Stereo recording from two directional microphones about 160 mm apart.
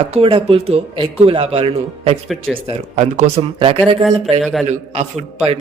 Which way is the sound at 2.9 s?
45° right (ahead or behind).